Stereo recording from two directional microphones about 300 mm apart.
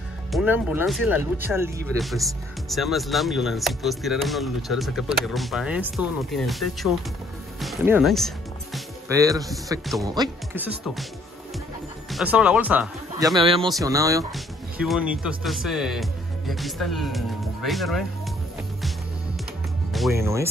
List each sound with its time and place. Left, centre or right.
0.3 s speech: centre
9.1 s speech: centre
12.1 s speech: centre
13.4 s speech: centre
19.9 s music: centre